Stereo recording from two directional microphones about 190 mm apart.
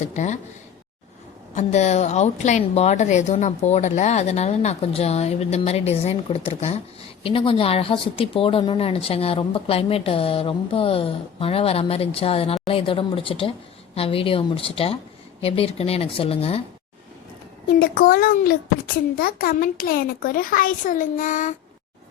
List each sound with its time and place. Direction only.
0.1 s a woman's voice: 40° left (ahead or behind)
1.5 s a woman's voice: 35° left (ahead or behind)
17.7 s a child's voice: 50° left (ahead or behind)